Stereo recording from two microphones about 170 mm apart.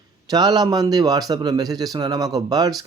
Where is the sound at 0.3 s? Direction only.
25° right (ahead or behind).